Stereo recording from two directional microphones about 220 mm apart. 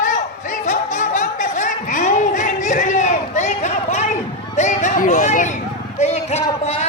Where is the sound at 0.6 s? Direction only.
35° left (ahead or behind).